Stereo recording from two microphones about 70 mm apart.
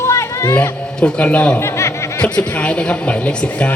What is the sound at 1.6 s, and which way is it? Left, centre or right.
Snicker, left.